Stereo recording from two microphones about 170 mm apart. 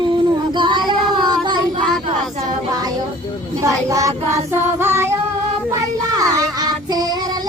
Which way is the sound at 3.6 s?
20° right (ahead or behind).